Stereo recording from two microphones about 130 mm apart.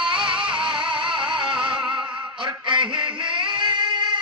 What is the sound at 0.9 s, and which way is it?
Music, 40° right (ahead or behind).